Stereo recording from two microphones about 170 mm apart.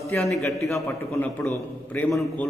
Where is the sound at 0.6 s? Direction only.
20° left (ahead or behind).